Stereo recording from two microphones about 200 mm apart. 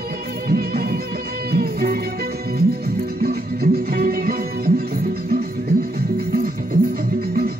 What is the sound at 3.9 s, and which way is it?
Music, 50° right (ahead or behind).